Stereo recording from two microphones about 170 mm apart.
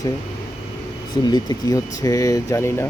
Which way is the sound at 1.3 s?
25° left (ahead or behind).